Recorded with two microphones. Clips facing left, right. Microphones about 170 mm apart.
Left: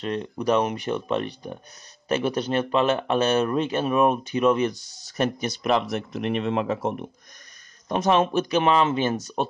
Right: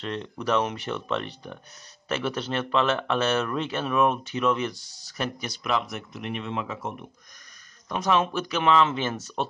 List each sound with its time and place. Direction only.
0.0 s speech: 15° left (ahead or behind)
5.6 s speech: 60° left (ahead or behind)
7.9 s speech: 25° left (ahead or behind)